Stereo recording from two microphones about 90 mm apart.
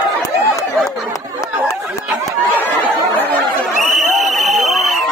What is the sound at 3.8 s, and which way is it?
Crowd, centre (ahead or behind).